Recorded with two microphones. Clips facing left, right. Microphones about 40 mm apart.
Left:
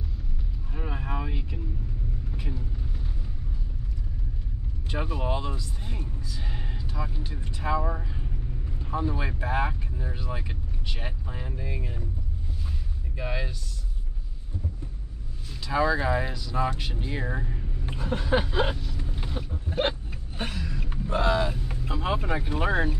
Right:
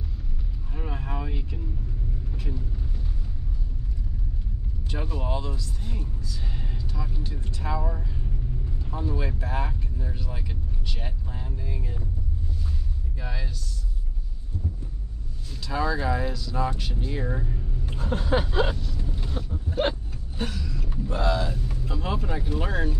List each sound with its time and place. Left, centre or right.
0.7 s vehicle: centre
4.9 s speech: centre
13.2 s speech: left
15.6 s speech: centre
18.4 s vehicle: left
18.9 s creak: centre
19.9 s a sound: left
21.6 s speech: left